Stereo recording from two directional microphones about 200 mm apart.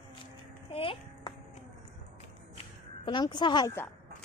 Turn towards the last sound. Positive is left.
turn(degrees=20)  # may be behind; listen again after turning